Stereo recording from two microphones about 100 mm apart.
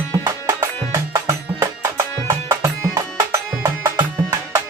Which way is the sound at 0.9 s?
30° right (ahead or behind).